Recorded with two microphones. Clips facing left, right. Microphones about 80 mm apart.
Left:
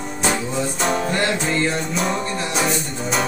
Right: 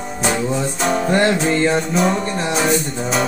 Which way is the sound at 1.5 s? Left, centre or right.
Right.